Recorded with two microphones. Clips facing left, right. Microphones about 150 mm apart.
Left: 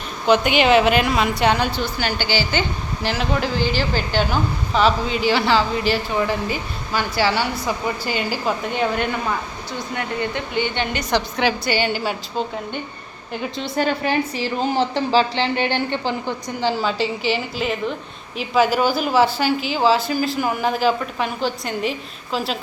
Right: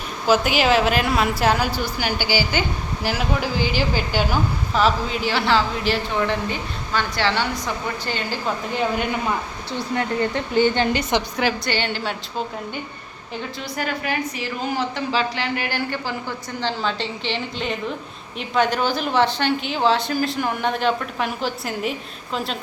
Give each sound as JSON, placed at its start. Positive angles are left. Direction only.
{"t": 0.3, "sound": "a woman's voice", "side_deg": 0}
{"t": 9.7, "sound": "a woman's voice", "side_deg": -30}
{"t": 11.3, "sound": "a woman's voice", "side_deg": 0}
{"t": 13.6, "sound": "a woman's voice", "side_deg": 30}